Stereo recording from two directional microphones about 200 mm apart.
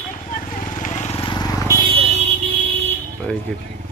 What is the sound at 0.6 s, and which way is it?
Vehicle, 40° left (ahead or behind).